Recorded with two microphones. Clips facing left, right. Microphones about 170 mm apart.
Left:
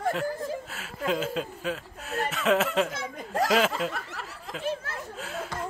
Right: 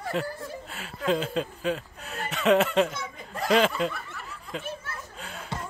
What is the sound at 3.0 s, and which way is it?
Snicker, 90° left.